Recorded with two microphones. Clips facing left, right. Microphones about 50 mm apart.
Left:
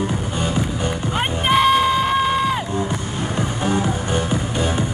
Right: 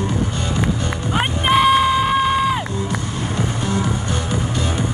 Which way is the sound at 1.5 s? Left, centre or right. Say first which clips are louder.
Right 1 dB; centre.